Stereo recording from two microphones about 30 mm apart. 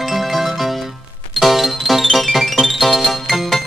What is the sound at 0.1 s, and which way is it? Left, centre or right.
Music, centre.